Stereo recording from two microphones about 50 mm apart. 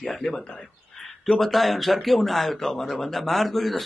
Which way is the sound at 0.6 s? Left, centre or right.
Centre.